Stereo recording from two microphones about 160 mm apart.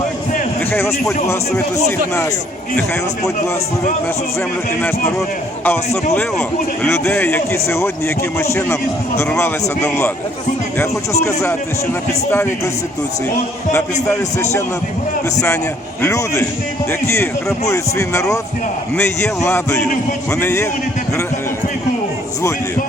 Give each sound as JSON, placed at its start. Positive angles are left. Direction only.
{"t": 5.6, "sound": "a man's voice", "side_deg": 10}
{"t": 11.3, "sound": "a man's voice", "side_deg": 20}
{"t": 16.0, "sound": "a man's voice", "side_deg": 15}
{"t": 17.7, "sound": "a man's voice", "side_deg": 15}